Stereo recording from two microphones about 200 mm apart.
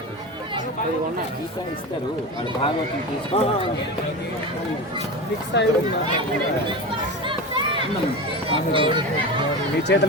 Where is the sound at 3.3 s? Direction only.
30° left (ahead or behind).